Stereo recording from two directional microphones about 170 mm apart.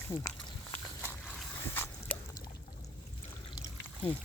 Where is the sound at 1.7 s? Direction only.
10° left (ahead or behind).